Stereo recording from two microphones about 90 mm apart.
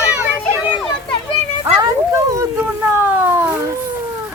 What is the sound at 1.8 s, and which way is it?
Dog, 35° right (ahead or behind).